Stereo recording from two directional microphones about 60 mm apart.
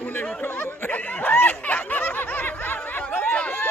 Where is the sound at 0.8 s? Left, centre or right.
Left.